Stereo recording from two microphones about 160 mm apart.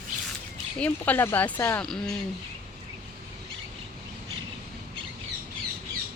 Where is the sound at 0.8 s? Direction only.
10° left (ahead or behind).